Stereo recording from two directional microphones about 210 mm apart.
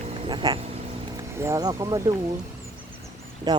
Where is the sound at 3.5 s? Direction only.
20° right (ahead or behind).